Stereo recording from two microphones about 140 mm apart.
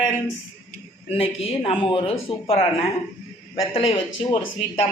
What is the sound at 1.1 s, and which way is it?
A woman's voice, 45° left (ahead or behind).